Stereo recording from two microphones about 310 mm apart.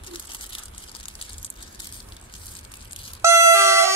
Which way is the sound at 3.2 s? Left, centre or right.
Centre.